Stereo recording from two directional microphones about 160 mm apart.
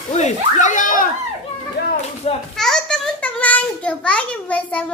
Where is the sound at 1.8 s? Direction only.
80° left.